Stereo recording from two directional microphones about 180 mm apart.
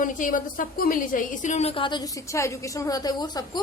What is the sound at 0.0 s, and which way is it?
A woman's voice, 45° left (ahead or behind).